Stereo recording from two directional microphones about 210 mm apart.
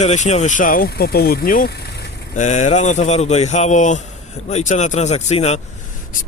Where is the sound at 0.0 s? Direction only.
35° left (ahead or behind).